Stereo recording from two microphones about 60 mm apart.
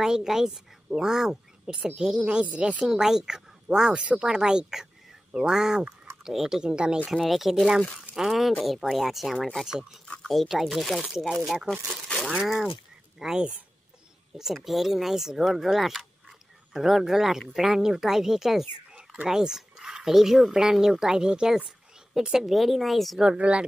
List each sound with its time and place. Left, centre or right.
0.0 s a woman's voice: centre
7.1 s a woman's voice: centre
10.2 s a woman's voice: centre
23.2 s speech: centre